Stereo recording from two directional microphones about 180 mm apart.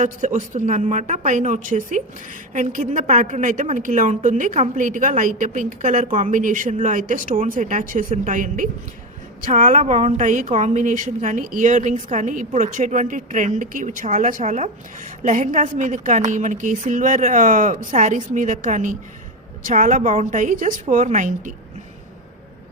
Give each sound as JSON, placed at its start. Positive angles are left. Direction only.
{"t": 0.0, "sound": "a woman's voice", "side_deg": -45}